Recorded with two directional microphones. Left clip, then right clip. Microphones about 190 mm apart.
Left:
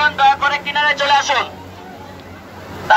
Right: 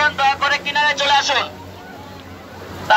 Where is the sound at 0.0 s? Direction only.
60° right (ahead or behind).